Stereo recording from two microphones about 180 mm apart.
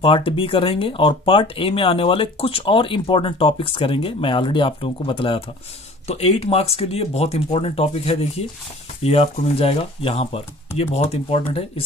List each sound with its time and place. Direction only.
0.0 s speech: 30° left (ahead or behind)